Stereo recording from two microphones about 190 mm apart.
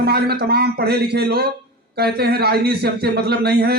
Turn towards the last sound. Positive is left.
turn(degrees=-55)  # may be behind; listen again after turning